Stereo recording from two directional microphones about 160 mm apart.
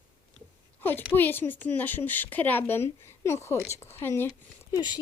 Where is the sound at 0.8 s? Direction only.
10° left (ahead or behind).